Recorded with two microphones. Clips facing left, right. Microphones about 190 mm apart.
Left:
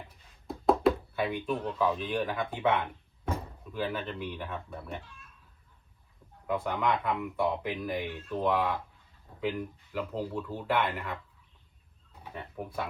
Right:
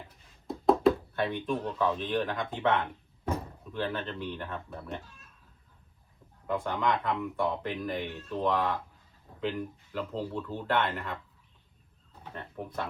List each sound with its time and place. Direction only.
0.4 s knock: centre (ahead or behind)
1.8 s speech: 10° left (ahead or behind)
5.0 s a sound: 40° right (ahead or behind)
6.5 s speech: 5° left (ahead or behind)
12.2 s speech: 10° left (ahead or behind)